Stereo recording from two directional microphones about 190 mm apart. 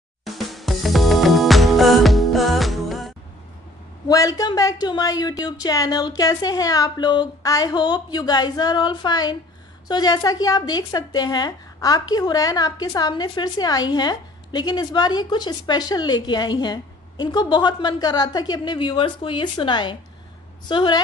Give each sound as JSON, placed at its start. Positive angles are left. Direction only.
{"t": 0.2, "sound": "music", "side_deg": 0}
{"t": 4.1, "sound": "a woman's voice", "side_deg": 20}